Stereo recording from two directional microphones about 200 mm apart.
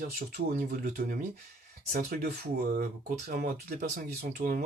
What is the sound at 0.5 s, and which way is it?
Speech, 45° right (ahead or behind).